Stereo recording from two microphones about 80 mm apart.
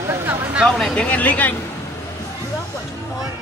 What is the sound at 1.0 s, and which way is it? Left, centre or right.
Speech, centre.